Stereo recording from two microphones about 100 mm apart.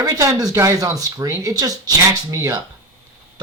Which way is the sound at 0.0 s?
35° right (ahead or behind).